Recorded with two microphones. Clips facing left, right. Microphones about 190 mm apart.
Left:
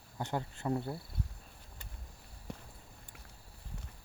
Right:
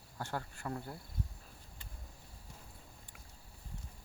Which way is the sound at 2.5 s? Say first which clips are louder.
Left 12 dB; 65° left (ahead or behind).